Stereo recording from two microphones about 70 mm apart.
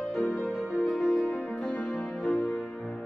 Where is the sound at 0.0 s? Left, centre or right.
Centre.